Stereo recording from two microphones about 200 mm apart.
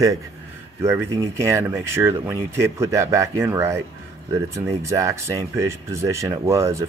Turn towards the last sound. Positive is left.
turn(degrees=-15)  # may be behind; listen again after turning